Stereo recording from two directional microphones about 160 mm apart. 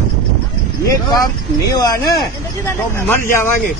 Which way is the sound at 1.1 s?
20° left (ahead or behind).